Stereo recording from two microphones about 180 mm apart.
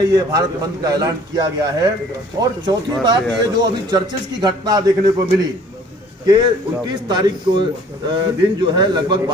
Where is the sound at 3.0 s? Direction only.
20° right (ahead or behind).